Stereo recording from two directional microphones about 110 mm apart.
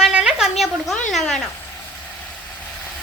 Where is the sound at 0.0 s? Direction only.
5° right (ahead or behind).